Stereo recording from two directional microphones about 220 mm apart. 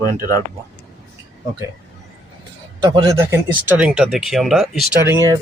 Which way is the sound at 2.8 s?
20° right (ahead or behind).